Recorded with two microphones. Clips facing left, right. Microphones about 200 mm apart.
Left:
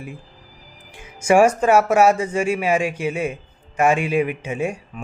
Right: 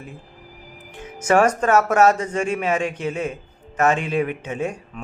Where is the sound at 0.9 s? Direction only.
10° left (ahead or behind).